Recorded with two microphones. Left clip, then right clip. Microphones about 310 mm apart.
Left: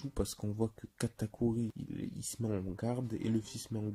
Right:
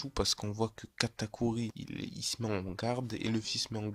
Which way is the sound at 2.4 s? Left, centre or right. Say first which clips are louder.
Even; right.